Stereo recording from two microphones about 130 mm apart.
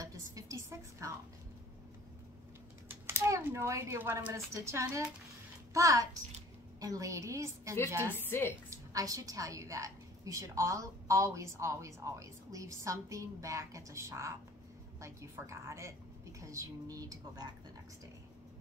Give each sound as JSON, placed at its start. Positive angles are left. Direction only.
{"t": 0.0, "sound": "a sound", "side_deg": -25}
{"t": 2.9, "sound": "a woman's voice", "side_deg": -20}
{"t": 8.3, "sound": "a woman's voice", "side_deg": 20}
{"t": 8.6, "sound": "a woman's voice", "side_deg": -25}